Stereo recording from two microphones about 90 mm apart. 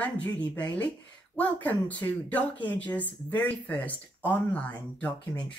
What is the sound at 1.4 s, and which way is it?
Speech, 20° left (ahead or behind).